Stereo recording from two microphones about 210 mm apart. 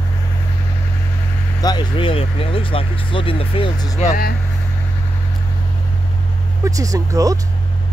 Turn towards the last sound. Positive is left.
turn(degrees=-15)  # may be behind; listen again after turning